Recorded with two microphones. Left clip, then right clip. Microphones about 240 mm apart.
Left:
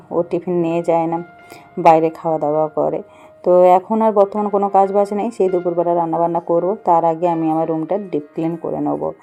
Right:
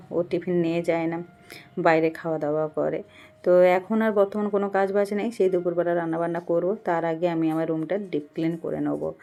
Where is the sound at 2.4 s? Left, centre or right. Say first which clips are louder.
Left 8 dB; left.